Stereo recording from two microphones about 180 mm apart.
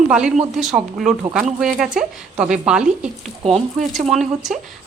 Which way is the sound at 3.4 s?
35° right (ahead or behind).